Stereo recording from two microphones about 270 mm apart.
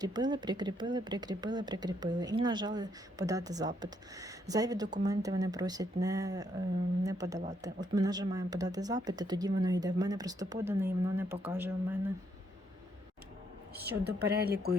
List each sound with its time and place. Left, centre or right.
0.0 s speech: centre
13.7 s a woman's voice: right